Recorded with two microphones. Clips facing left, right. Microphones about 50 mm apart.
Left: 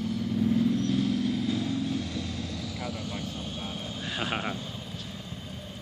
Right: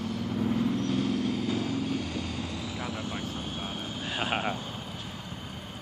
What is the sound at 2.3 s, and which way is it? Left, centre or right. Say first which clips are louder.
Vehicle: right 1 dB; right.